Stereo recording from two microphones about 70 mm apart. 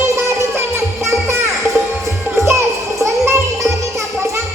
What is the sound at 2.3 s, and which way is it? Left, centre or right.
Music, right.